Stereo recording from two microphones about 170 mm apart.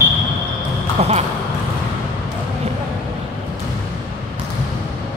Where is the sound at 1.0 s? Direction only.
40° right (ahead or behind).